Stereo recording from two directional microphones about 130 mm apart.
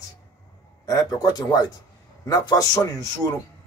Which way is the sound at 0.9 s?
30° left (ahead or behind).